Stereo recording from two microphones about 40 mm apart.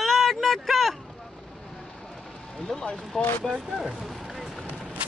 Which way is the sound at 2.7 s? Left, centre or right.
Centre.